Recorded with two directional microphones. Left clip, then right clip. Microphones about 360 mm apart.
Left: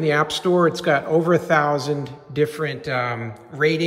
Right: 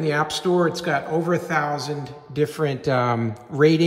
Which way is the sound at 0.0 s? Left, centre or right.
Centre.